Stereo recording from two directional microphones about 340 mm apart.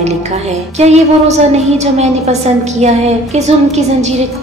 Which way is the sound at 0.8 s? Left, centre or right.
Centre.